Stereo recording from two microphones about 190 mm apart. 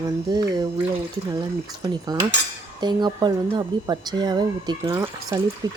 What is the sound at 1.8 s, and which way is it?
Speech, 20° right (ahead or behind).